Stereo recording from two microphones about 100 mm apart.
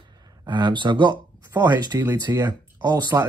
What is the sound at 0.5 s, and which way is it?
Speech, 50° right (ahead or behind).